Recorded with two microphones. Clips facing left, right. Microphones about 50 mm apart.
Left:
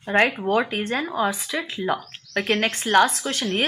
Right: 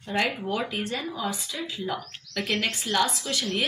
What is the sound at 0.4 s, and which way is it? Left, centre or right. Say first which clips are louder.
Speech: left 7 dB; left.